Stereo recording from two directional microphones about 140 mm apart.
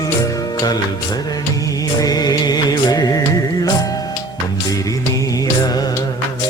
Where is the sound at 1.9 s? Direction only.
25° left (ahead or behind).